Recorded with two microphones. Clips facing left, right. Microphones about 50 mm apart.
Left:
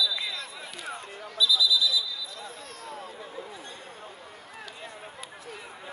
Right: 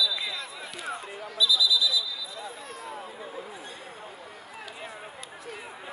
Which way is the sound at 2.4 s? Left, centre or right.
Centre.